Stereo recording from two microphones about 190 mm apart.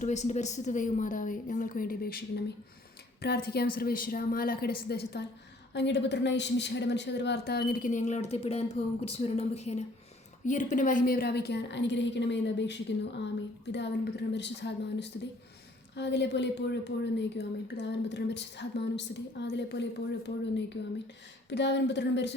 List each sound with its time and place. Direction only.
0.0 s a woman's voice: 40° left (ahead or behind); by 22.4 s 65° left (ahead or behind)